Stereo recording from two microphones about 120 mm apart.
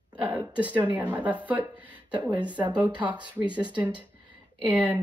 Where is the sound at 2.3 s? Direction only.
40° right (ahead or behind).